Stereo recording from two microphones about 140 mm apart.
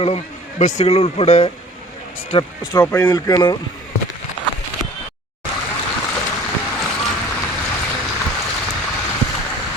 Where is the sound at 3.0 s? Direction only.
25° left (ahead or behind).